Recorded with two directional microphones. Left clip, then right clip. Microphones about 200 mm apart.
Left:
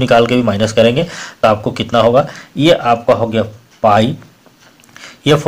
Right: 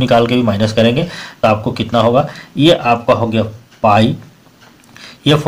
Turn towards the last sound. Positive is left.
turn(degrees=25)  # may be behind; listen again after turning